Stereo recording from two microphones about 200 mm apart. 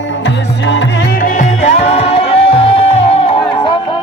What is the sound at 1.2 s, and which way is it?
Music, 35° left (ahead or behind).